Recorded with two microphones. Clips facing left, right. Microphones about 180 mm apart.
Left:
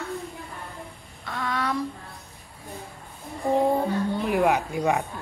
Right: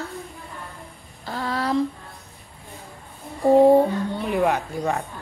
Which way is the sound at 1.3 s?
35° right (ahead or behind).